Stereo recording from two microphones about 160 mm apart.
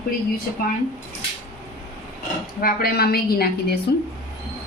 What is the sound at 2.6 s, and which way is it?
A woman's voice, 70° left (ahead or behind).